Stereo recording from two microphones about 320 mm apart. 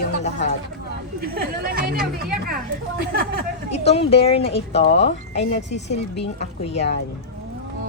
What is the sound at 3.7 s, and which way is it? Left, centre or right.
Speech, centre.